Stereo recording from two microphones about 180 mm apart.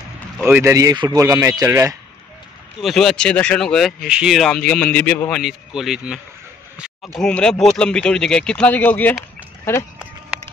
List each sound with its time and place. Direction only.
0.4 s speech: 10° right (ahead or behind)
2.8 s speech: centre (ahead or behind)